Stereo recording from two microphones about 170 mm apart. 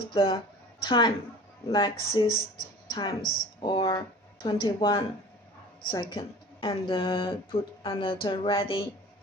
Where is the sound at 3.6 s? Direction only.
25° left (ahead or behind).